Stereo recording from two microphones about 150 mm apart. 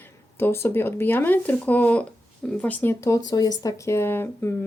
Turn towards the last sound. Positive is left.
turn(degrees=15)  # may be behind; listen again after turning